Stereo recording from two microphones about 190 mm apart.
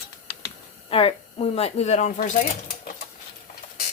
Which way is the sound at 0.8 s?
30° left (ahead or behind).